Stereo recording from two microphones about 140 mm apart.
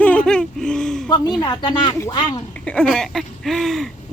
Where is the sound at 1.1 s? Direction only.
30° left (ahead or behind).